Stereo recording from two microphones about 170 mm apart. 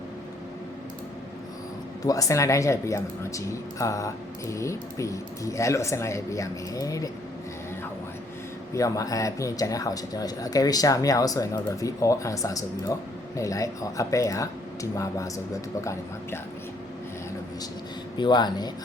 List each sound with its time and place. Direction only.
2.0 s speech: 20° left (ahead or behind)
8.7 s speech: 20° left (ahead or behind)
18.2 s speech: 25° left (ahead or behind)